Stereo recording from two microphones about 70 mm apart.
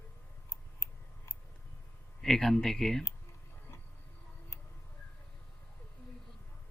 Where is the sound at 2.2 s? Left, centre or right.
Centre.